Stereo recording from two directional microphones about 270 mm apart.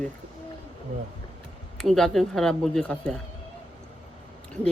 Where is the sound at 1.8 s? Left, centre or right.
Centre.